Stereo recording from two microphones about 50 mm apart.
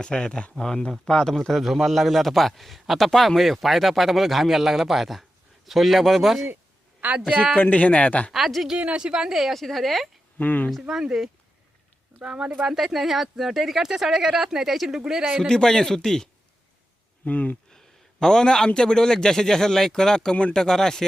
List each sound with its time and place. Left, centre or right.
0.0 s a man's voice: centre
7.2 s speech: centre
7.5 s speech: left
8.3 s a man's voice: centre
9.0 s a man's voice: centre
10.3 s speech: left
10.8 s speech: centre
15.4 s speech: centre
17.2 s speech: left
17.7 s a man's voice: centre